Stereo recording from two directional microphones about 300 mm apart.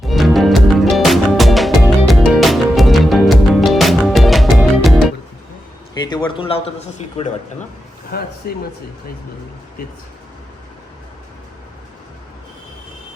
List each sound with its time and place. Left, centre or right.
0.0 s music: centre
5.9 s a man's voice: centre
8.1 s speech: left